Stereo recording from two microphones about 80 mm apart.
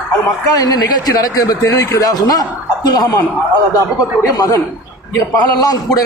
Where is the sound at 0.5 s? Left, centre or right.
Left.